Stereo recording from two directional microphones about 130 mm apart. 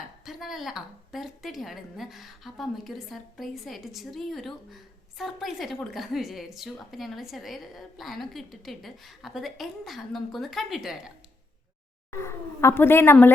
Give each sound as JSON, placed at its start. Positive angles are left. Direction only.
{"t": 0.3, "sound": "a woman's voice", "side_deg": 0}
{"t": 12.1, "sound": "speech", "side_deg": 20}